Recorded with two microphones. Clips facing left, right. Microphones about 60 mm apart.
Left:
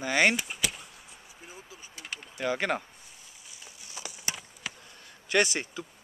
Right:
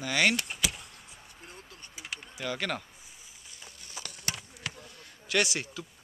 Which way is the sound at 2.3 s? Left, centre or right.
Left.